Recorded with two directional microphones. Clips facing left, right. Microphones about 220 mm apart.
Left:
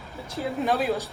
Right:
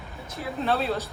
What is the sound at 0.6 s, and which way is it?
Speech, 15° left (ahead or behind).